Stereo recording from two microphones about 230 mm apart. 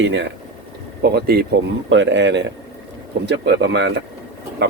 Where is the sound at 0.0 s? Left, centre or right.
Right.